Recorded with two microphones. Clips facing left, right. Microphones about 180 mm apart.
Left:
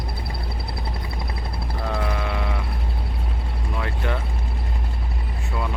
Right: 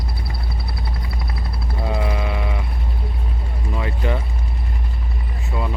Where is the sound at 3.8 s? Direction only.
5° right (ahead or behind).